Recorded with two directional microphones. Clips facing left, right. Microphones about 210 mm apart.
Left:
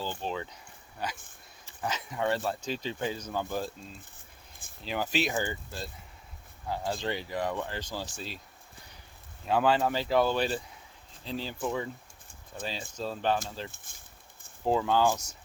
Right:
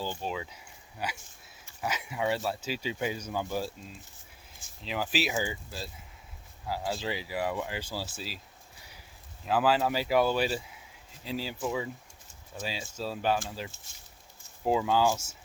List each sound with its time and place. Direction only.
0.2 s speech: 5° right (ahead or behind)
4.8 s speech: centre (ahead or behind)
9.5 s speech: 5° right (ahead or behind)
13.7 s speech: 55° left (ahead or behind)
14.6 s speech: 5° right (ahead or behind)